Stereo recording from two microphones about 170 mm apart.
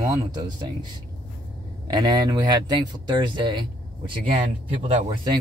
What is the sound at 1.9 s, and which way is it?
Speech, 25° right (ahead or behind).